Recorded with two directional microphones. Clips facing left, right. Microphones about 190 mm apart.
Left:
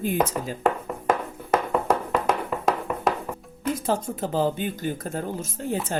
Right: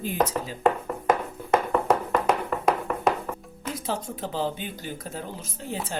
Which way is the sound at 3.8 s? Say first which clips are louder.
Left 2 dB; 50° left (ahead or behind).